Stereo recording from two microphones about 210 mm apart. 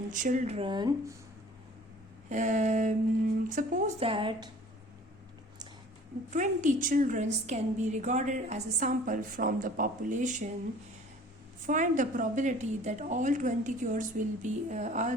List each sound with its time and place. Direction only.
0.1 s speech: 35° right (ahead or behind); by 1.1 s 20° right (ahead or behind)
2.3 s a woman's voice: 35° right (ahead or behind)
6.3 s a woman's voice: 35° right (ahead or behind)
11.6 s a woman's voice: 35° right (ahead or behind)